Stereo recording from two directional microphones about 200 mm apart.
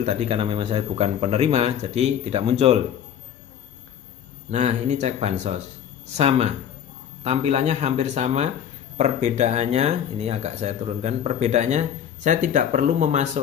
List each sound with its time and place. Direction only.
0.0 s speech: 35° right (ahead or behind)
4.5 s speech: 35° right (ahead or behind)